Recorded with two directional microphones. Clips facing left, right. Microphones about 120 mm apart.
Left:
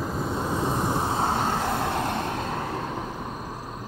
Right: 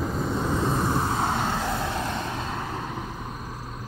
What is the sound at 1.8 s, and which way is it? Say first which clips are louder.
Vehicle: left 2 dB; 55° left (ahead or behind).